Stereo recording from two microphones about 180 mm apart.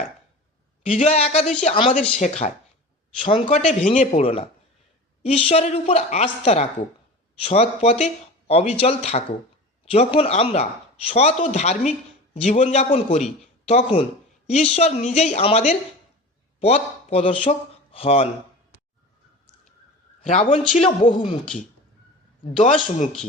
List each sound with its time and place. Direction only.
0.9 s speech: 35° left (ahead or behind)
20.3 s speech: 40° left (ahead or behind)